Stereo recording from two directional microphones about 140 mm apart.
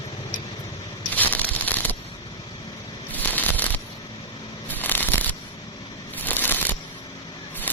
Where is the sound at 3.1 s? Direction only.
10° left (ahead or behind).